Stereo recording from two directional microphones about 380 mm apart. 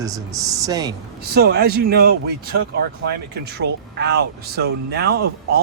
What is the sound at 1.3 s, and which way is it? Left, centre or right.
Speech, right.